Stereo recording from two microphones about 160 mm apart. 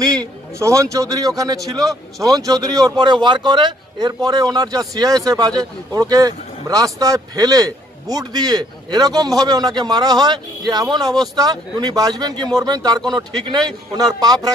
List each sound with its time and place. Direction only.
0.6 s a man's voice: 20° right (ahead or behind)